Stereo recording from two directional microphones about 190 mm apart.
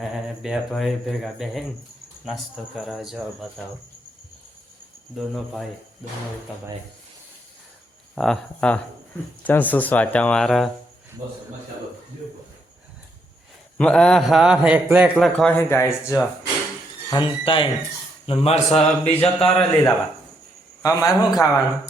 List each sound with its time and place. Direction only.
0.0 s a man's voice: centre (ahead or behind)
5.1 s a man's voice: centre (ahead or behind)
8.1 s a man's voice: centre (ahead or behind)
13.7 s a man's voice: 5° left (ahead or behind)
17.1 s a man's voice: 25° left (ahead or behind)
19.4 s a man's voice: 5° left (ahead or behind)
20.8 s a man's voice: 15° left (ahead or behind)